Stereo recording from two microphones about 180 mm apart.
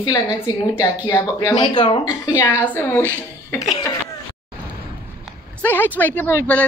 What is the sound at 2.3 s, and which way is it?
A woman's voice, 10° left (ahead or behind).